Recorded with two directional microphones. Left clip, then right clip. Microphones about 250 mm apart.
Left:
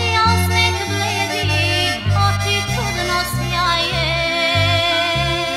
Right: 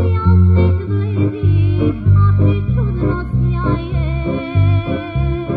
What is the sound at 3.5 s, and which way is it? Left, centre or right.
Music, left.